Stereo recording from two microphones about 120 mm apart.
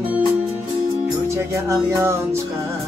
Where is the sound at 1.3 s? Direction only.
25° right (ahead or behind).